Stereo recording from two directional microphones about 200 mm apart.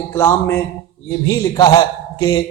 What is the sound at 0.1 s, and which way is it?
A man's voice, 10° left (ahead or behind).